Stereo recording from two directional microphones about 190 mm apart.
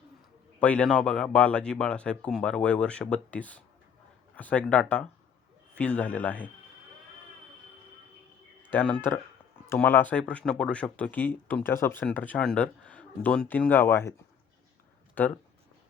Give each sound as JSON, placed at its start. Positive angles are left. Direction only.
{"t": 0.6, "sound": "speech", "side_deg": 5}
{"t": 8.7, "sound": "speech", "side_deg": 10}
{"t": 15.2, "sound": "speech", "side_deg": 10}